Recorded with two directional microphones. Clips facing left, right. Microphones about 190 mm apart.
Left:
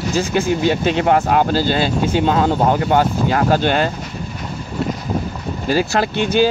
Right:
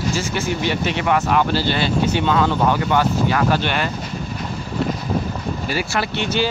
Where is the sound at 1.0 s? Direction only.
35° left (ahead or behind).